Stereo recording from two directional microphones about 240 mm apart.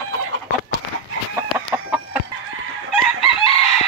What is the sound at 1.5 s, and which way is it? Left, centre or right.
Chicken, centre.